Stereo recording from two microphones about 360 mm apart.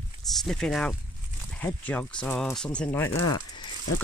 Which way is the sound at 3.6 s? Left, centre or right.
Left.